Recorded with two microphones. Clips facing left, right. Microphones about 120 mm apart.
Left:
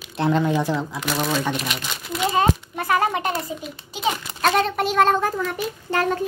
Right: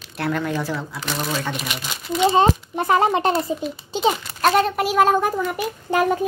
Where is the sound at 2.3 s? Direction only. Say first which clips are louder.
Even; 25° right (ahead or behind).